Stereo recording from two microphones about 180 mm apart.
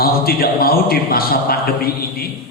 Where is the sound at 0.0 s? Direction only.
55° left (ahead or behind).